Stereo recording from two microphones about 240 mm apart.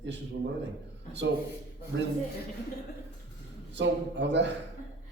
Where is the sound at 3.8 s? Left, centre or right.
Right.